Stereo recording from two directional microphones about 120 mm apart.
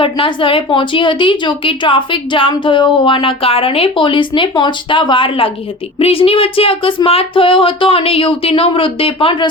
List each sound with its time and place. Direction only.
0.0 s a woman's voice: 45° left (ahead or behind)